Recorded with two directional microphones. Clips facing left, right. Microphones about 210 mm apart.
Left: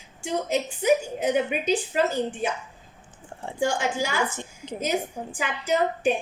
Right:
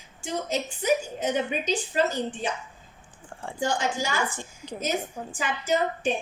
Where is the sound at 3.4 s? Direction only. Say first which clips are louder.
Left 2 dB; 10° left (ahead or behind).